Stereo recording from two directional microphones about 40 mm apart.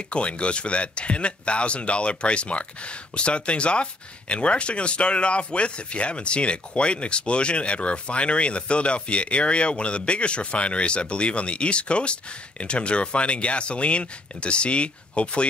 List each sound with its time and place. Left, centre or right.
0.1 s speech: left